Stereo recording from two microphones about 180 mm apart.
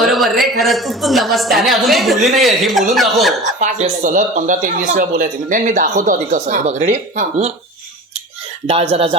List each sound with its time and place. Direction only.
0.0 s a woman's voice: centre (ahead or behind)
3.6 s speech: 45° right (ahead or behind)
8.6 s speech: 30° right (ahead or behind)